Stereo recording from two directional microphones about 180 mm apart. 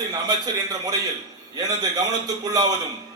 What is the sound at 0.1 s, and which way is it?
Speech, 20° right (ahead or behind).